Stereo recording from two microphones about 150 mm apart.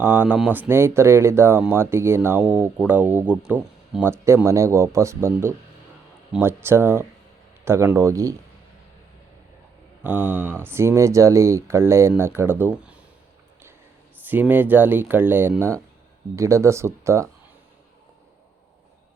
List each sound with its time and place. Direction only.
0.0 s speech: 10° right (ahead or behind)
10.0 s speech: 10° right (ahead or behind)
14.3 s speech: 10° right (ahead or behind)